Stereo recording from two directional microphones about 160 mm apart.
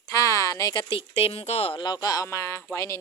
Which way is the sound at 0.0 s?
20° left (ahead or behind).